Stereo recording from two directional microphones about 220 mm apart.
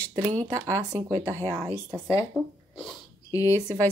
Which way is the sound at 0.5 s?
10° right (ahead or behind).